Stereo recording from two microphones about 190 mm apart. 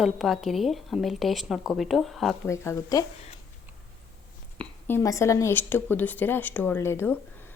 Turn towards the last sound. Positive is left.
turn(degrees=10)  # may be behind; listen again after turning